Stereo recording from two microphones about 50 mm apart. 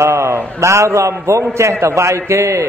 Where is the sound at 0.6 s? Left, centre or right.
Right.